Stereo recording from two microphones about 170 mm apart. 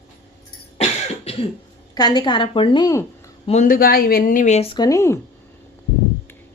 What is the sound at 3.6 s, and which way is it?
Speech, 60° left (ahead or behind).